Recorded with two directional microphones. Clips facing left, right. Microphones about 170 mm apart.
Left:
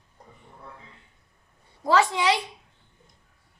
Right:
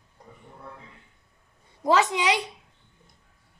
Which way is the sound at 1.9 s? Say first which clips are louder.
Even; 20° right (ahead or behind).